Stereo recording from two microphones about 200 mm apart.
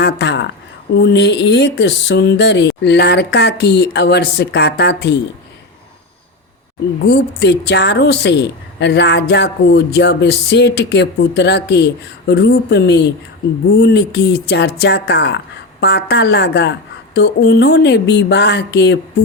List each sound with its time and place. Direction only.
0.0 s a sound: 60° left (ahead or behind)
0.9 s a woman's voice: 55° left (ahead or behind)
7.0 s a woman's voice: 55° left (ahead or behind)